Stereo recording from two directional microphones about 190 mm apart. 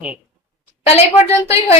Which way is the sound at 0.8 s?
30° left (ahead or behind).